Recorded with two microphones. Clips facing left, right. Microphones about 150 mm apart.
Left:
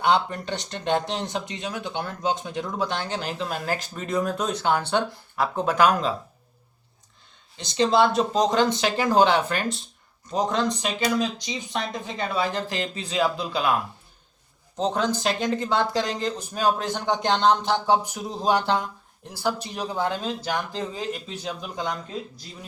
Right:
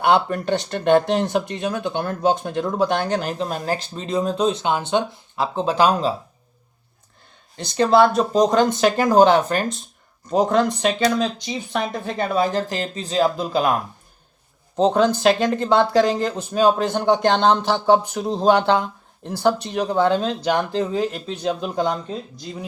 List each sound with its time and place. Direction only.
0.0 s speech: 55° right (ahead or behind); by 6.1 s 30° right (ahead or behind)
7.5 s speech: 50° right (ahead or behind)
10.2 s speech: 55° right (ahead or behind)
11.1 s speech: 5° left (ahead or behind)
11.3 s speech: 55° right (ahead or behind)
14.8 s speech: 60° right (ahead or behind)
18.1 s speech: 75° right (ahead or behind); by 21.8 s 60° right (ahead or behind)